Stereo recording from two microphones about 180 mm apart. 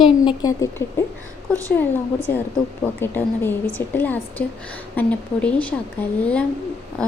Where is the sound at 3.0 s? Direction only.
10° left (ahead or behind).